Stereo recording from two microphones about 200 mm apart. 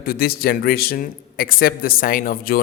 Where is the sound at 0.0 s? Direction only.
50° left (ahead or behind).